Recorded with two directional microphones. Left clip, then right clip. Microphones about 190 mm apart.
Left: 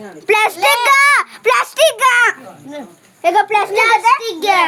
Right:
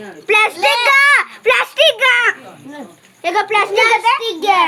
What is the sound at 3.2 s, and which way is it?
Speech, 45° left (ahead or behind).